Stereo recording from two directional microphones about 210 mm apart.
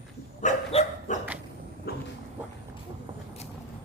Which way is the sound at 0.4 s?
30° left (ahead or behind).